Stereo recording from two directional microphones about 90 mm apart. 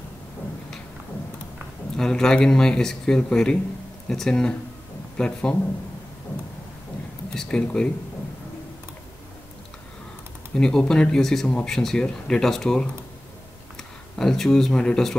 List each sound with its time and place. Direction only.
2.0 s speech: 5° left (ahead or behind)
7.3 s speech: 10° left (ahead or behind)
10.5 s speech: 10° left (ahead or behind)
14.1 s speech: 5° left (ahead or behind)